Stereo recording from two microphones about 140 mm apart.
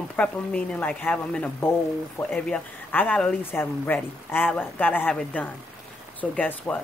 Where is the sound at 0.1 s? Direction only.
10° left (ahead or behind).